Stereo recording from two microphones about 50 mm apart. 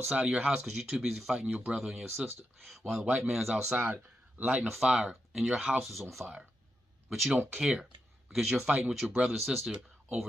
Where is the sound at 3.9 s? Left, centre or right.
Right.